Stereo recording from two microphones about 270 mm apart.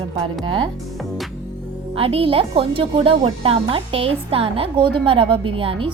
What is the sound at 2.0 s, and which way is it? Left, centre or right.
Speech, right.